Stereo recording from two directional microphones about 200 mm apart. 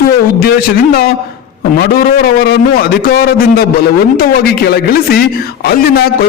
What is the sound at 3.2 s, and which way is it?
A man's voice, 50° left (ahead or behind).